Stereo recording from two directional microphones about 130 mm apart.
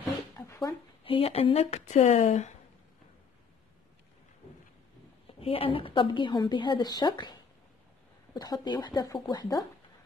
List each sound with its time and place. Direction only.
0.4 s a sound: 20° left (ahead or behind)
1.0 s speech: 45° left (ahead or behind); by 2.5 s 65° left (ahead or behind)
5.2 s a woman's voice: 45° left (ahead or behind)
8.4 s a woman's voice: 30° left (ahead or behind)